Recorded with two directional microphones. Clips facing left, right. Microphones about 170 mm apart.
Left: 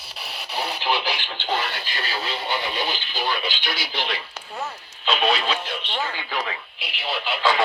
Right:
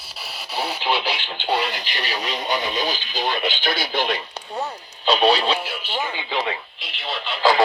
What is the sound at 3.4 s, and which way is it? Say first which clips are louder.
Speech: right 6 dB; 50° right (ahead or behind).